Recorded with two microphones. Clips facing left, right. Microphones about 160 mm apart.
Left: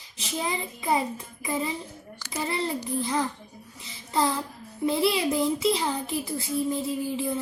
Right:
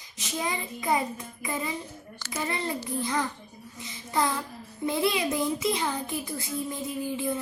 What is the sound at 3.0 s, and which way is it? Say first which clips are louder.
Speech: left 1 dB; 30° left (ahead or behind).